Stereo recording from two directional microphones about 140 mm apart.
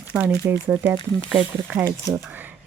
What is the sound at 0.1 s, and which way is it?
Speech, 10° right (ahead or behind).